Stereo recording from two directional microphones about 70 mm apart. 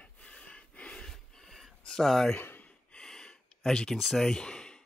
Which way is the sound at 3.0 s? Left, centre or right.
Centre.